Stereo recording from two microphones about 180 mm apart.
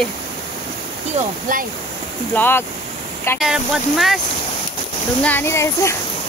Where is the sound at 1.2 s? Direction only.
50° right (ahead or behind).